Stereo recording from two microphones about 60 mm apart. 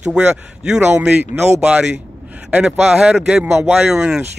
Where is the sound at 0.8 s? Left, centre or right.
Right.